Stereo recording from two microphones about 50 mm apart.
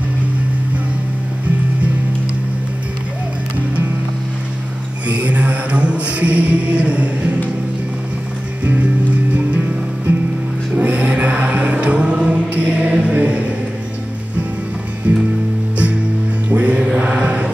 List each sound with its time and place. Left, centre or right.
5.0 s music: right
8.6 s music: right
10.8 s choir: right
15.0 s music: right
16.4 s mantra: right